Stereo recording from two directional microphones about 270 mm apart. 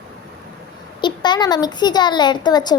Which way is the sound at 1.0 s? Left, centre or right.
Centre.